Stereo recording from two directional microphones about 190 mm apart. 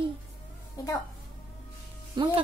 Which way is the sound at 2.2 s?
25° right (ahead or behind).